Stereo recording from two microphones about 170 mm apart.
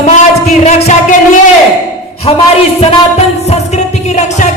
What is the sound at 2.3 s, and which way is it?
Speech, 35° left (ahead or behind).